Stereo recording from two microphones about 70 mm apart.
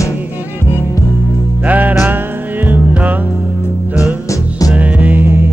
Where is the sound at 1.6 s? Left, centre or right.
Right.